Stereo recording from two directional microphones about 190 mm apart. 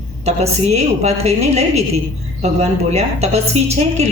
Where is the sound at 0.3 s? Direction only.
35° right (ahead or behind).